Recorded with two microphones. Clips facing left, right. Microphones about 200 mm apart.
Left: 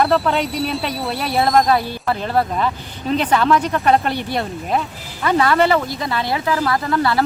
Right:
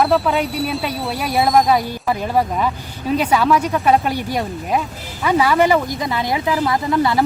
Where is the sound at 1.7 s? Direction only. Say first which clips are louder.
Right 1 dB; 10° right (ahead or behind).